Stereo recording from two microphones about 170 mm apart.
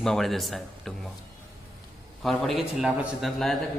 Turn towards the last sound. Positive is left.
turn(degrees=0)  # may be behind; listen again after turning